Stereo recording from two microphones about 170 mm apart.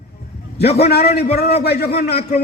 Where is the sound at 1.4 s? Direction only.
70° left (ahead or behind).